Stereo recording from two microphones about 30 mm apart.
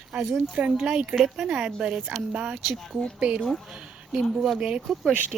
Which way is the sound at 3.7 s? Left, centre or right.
Right.